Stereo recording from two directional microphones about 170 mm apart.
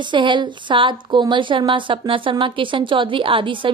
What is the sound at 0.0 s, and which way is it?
A woman's voice, 30° right (ahead or behind).